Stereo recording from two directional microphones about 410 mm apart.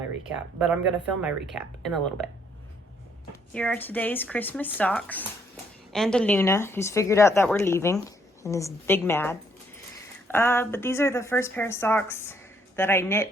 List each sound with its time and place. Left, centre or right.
0.3 s speech: centre
3.5 s a woman's voice: centre